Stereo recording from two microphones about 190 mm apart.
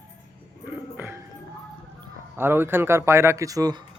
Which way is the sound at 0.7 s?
10° right (ahead or behind).